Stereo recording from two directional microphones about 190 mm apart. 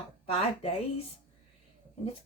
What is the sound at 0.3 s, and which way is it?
Speech, 30° left (ahead or behind).